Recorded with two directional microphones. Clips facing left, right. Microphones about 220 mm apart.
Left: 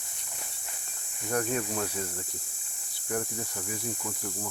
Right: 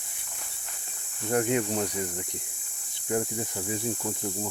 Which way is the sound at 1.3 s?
20° right (ahead or behind).